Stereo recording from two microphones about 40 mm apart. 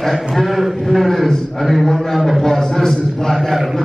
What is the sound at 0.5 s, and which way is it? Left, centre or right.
A man's voice, centre.